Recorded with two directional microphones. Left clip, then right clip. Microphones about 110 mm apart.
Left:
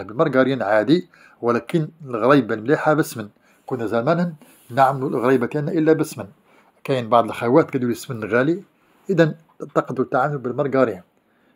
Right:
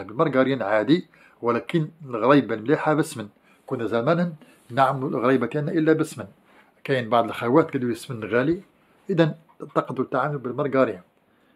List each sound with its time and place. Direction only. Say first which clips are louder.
0.0 s speech: left 3 dB; 35° left (ahead or behind)
9.0 s speech: left 4 dB; 25° left (ahead or behind)